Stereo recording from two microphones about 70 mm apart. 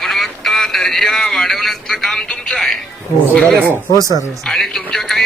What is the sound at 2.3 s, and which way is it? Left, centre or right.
Music, centre.